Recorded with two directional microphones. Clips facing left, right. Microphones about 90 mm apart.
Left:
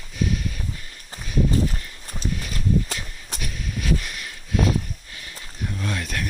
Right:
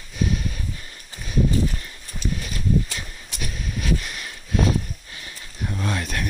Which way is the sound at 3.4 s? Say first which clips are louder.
Right 1 dB; 25° right (ahead or behind).